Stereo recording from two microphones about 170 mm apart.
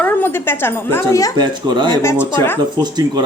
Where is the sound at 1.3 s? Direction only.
25° right (ahead or behind).